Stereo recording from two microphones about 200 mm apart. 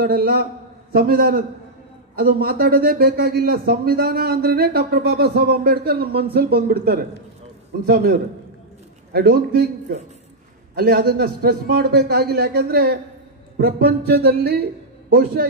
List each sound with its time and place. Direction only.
0.0 s speech: 50° right (ahead or behind)